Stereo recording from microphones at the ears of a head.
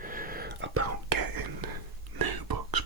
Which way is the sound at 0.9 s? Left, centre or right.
Right.